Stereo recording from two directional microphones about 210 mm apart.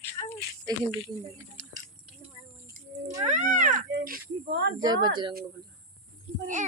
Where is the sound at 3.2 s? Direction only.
35° right (ahead or behind); by 4.7 s 55° right (ahead or behind).